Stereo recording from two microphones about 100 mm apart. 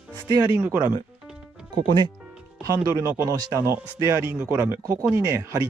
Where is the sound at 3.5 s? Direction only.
30° right (ahead or behind).